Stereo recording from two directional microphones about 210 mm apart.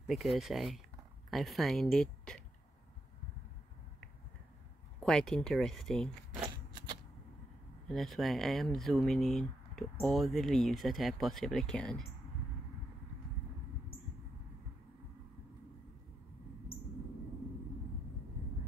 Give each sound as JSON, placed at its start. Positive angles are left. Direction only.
{"t": 0.0, "sound": "speech", "side_deg": 0}
{"t": 5.0, "sound": "speech", "side_deg": 0}
{"t": 6.4, "sound": "shuffling cards", "side_deg": -20}
{"t": 7.9, "sound": "speech", "side_deg": 0}